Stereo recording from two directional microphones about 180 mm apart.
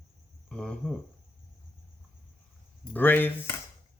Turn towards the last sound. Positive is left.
turn(degrees=10)  # may be behind; listen again after turning